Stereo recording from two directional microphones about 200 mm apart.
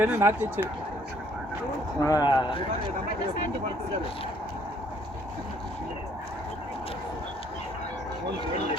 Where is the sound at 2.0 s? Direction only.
20° left (ahead or behind).